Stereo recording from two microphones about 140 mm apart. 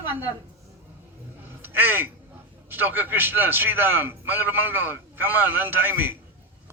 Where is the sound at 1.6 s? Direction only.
15° right (ahead or behind).